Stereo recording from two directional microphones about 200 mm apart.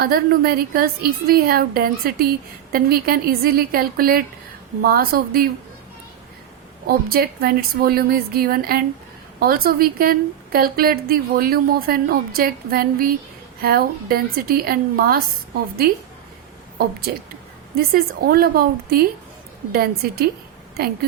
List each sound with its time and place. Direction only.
0.0 s a woman's voice: 50° right (ahead or behind)
6.8 s a woman's voice: 50° right (ahead or behind)
17.7 s a woman's voice: 50° right (ahead or behind)